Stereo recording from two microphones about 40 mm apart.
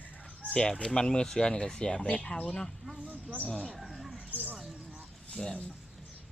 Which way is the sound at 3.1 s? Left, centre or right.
Right.